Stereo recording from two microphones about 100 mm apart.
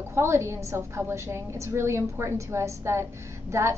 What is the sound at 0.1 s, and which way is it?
A woman's voice, 25° right (ahead or behind).